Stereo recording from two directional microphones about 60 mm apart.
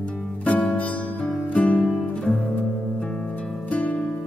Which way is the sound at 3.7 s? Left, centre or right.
Left.